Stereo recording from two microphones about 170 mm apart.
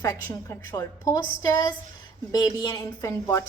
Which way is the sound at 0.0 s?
20° left (ahead or behind).